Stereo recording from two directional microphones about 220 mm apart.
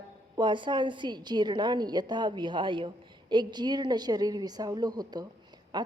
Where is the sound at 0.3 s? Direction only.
20° right (ahead or behind).